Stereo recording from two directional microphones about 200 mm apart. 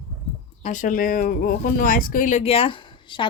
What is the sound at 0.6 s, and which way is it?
Speech, 35° left (ahead or behind).